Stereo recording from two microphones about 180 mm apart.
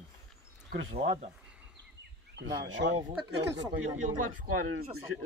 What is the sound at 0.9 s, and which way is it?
Speech, 40° right (ahead or behind).